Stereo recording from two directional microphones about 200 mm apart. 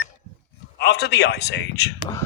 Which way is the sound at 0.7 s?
55° left (ahead or behind).